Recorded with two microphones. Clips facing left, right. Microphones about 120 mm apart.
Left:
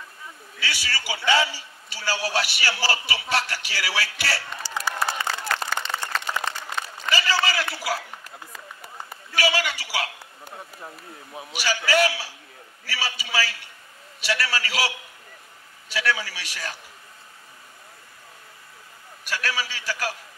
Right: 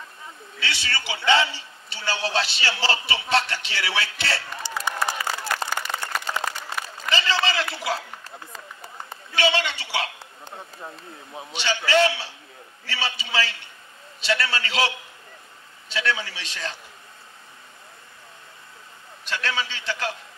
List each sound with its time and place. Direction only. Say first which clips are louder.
0.6 s a man's voice: right 1 dB; 25° right (ahead or behind)
7.1 s a sound: even; 25° right (ahead or behind)
11.3 s a man's voice: even; 25° right (ahead or behind)
19.2 s a man's voice: right 1 dB; 25° right (ahead or behind)